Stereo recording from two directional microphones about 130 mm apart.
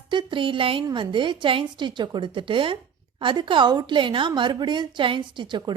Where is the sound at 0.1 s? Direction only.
35° right (ahead or behind).